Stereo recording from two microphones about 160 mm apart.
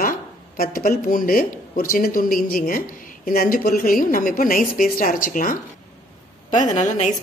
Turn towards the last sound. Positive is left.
turn(degrees=50)  # may be behind; listen again after turning